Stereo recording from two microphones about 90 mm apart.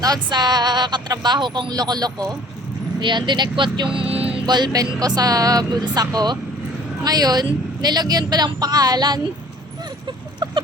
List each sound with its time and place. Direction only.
0.0 s speech: 50° right (ahead or behind)
3.0 s speech: 60° right (ahead or behind)
3.9 s music: 90° right
4.4 s speech: 55° right (ahead or behind)
10.1 s chicken: 60° right (ahead or behind)